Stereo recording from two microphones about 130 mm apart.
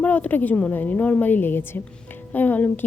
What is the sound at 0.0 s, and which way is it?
A woman's voice, 10° left (ahead or behind).